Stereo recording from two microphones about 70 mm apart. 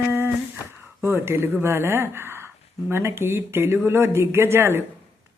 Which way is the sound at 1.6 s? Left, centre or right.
Right.